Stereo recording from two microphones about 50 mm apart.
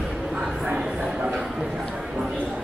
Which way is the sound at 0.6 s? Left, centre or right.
Centre.